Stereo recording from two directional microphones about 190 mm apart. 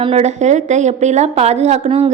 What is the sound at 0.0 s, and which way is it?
A woman's voice, 35° right (ahead or behind).